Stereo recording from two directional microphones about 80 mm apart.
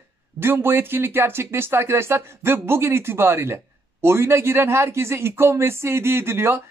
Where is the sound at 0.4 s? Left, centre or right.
Right.